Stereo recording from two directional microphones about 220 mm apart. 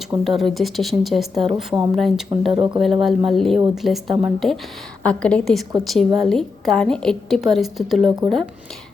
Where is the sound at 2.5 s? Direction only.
25° right (ahead or behind).